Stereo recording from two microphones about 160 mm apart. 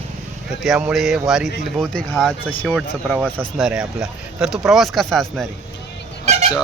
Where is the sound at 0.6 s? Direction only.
5° right (ahead or behind).